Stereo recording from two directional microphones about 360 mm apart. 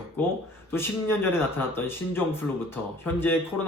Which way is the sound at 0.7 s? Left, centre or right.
Centre.